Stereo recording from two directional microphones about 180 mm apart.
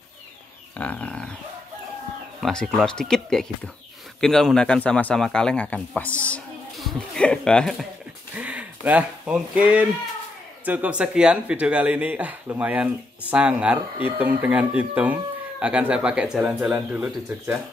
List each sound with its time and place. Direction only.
0.7 s a sound: 5° left (ahead or behind)
2.4 s speech: centre (ahead or behind)
8.4 s speech: 10° right (ahead or behind)